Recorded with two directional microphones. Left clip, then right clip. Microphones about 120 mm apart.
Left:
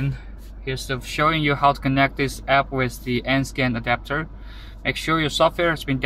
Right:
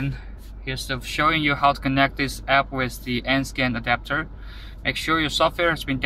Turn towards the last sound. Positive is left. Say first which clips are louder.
# left 1 dB
turn(degrees=30)  # may be behind; listen again after turning